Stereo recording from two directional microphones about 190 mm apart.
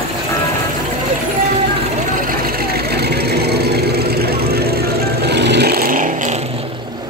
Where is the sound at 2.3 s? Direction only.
50° right (ahead or behind).